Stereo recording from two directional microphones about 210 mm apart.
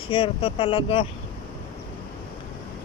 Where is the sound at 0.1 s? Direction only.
25° left (ahead or behind).